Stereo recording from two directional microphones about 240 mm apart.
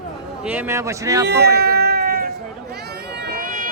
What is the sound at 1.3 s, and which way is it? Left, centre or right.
Cat, right.